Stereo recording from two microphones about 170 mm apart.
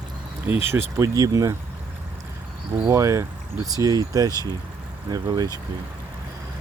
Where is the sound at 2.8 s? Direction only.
15° right (ahead or behind).